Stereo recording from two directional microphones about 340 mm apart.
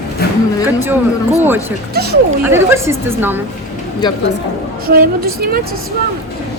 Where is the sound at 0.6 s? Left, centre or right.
Centre.